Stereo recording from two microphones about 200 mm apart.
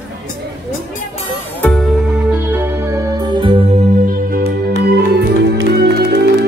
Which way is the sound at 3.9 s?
45° right (ahead or behind).